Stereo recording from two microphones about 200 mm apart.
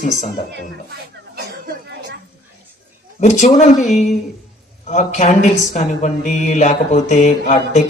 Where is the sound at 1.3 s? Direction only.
50° right (ahead or behind).